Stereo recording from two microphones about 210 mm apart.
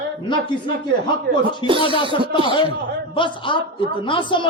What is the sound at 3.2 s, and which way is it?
A man's voice, 25° left (ahead or behind).